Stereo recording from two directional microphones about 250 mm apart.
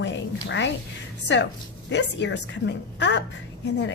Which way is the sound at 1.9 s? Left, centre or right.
Left.